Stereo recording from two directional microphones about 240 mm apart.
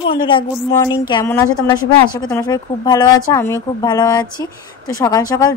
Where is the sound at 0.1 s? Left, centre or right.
Centre.